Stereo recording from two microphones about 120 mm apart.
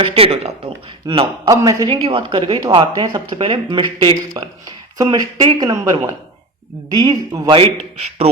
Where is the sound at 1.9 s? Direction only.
50° right (ahead or behind).